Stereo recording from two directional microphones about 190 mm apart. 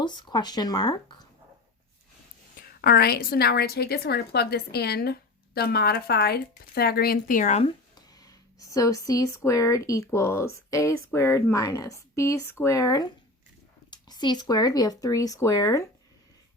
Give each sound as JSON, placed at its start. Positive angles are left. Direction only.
{"t": 0.0, "sound": "speech", "side_deg": 25}
{"t": 2.6, "sound": "a woman's voice", "side_deg": 50}